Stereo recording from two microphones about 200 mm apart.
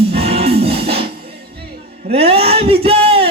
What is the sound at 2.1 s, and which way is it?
Speech, 30° right (ahead or behind).